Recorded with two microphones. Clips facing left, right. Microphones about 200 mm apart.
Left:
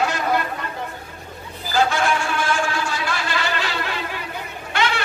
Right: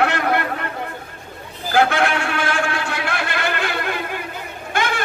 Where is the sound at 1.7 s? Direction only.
60° right (ahead or behind).